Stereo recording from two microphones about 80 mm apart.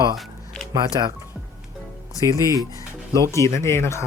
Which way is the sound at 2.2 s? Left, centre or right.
Right.